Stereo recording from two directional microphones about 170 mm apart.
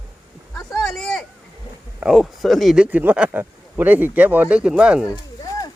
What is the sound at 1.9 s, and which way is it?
Speech, 5° right (ahead or behind).